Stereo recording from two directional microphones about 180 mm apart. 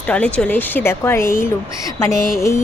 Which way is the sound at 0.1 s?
5° left (ahead or behind).